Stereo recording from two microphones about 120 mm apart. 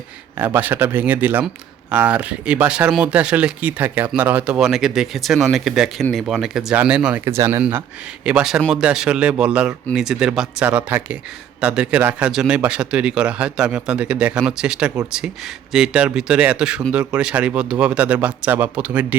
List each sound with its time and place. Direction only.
0.3 s speech: 15° right (ahead or behind)
7.3 s speech: 25° right (ahead or behind)
7.6 s speech: 10° right (ahead or behind)